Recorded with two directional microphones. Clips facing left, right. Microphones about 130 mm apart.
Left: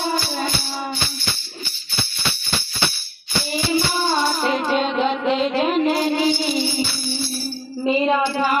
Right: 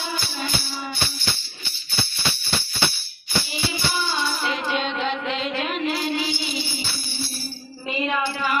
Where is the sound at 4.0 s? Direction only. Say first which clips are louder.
Left 6 dB; 45° left (ahead or behind).